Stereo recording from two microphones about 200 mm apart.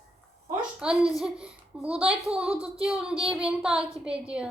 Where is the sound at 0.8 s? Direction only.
5° right (ahead or behind).